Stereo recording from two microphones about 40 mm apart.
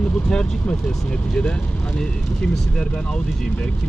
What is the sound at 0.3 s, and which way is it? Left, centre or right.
Speech, left.